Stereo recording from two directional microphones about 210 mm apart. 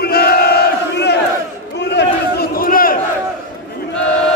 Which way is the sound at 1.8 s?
55° left (ahead or behind).